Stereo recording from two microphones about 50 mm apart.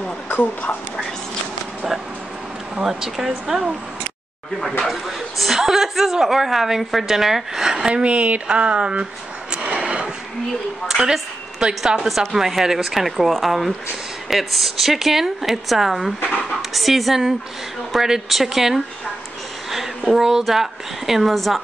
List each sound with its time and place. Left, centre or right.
0.3 s speech: left
2.8 s speech: centre
4.6 s a woman's voice: centre
7.9 s speech: right
9.5 s a sound: right
10.9 s a woman's voice: centre
20.1 s a woman's voice: centre